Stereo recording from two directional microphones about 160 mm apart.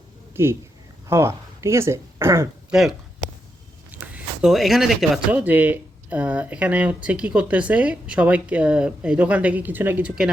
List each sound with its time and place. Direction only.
0.4 s speech: 15° right (ahead or behind)
4.0 s speech: 10° right (ahead or behind)